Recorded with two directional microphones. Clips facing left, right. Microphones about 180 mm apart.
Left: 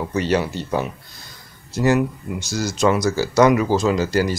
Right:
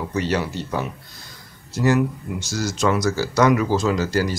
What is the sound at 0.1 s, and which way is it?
Speech, 20° left (ahead or behind).